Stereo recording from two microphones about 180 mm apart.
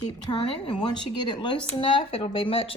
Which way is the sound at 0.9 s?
25° left (ahead or behind).